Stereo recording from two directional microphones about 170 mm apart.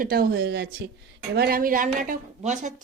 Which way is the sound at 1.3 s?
65° right (ahead or behind).